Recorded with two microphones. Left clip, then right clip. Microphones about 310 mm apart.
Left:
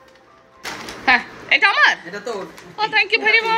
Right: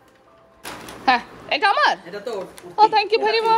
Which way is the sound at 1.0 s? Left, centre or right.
Centre.